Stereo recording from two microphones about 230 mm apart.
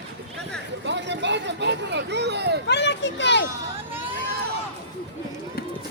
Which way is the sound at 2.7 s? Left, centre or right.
Left.